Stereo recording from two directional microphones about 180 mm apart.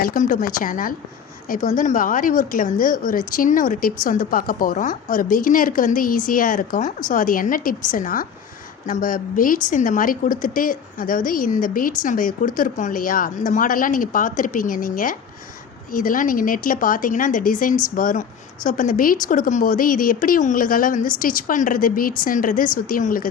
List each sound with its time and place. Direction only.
0.0 s speech: 50° left (ahead or behind)